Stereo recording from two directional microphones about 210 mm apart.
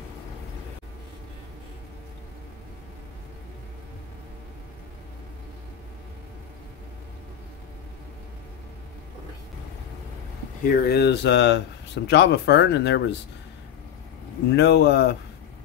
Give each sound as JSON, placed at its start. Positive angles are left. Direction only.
{"t": 10.7, "sound": "speech", "side_deg": 50}
{"t": 14.5, "sound": "speech", "side_deg": 55}